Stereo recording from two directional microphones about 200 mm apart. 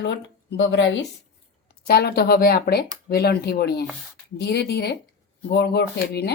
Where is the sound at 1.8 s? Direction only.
55° left (ahead or behind).